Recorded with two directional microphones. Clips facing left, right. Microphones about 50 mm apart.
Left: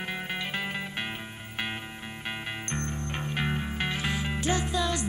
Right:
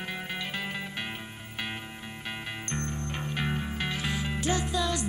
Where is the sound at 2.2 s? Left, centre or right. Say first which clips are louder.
Left 2 dB; left.